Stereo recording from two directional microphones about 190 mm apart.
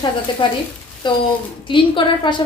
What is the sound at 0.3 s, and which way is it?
A woman's voice, 25° left (ahead or behind).